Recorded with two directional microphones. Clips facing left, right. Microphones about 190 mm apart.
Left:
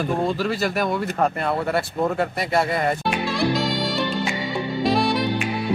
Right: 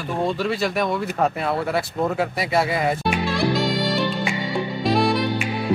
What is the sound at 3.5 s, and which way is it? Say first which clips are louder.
Music: right 1 dB; centre (ahead or behind).